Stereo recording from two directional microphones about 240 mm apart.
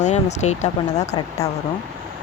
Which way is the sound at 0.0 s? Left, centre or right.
Left.